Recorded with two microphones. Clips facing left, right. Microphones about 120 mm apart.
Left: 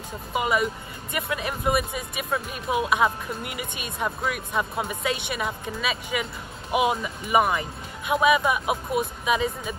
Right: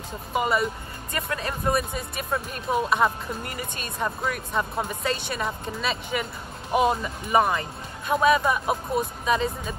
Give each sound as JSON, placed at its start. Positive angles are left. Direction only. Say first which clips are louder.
{"t": 0.3, "sound": "speech", "louder": "even", "side_deg": 5}
{"t": 1.1, "sound": "speech", "louder": "left 1 dB", "side_deg": 15}